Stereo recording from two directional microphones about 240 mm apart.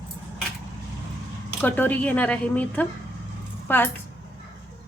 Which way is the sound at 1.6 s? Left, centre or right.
Centre.